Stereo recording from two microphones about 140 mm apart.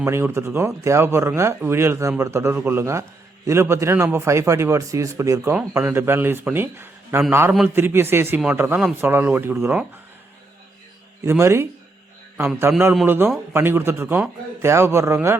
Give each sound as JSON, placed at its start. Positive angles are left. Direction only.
{"t": 0.0, "sound": "a man's voice", "side_deg": -20}
{"t": 11.2, "sound": "a man's voice", "side_deg": -20}